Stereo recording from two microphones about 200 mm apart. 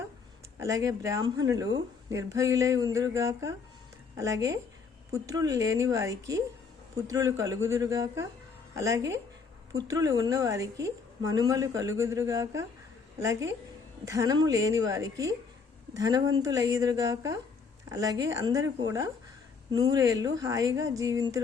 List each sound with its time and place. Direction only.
0.6 s a woman's voice: 15° right (ahead or behind)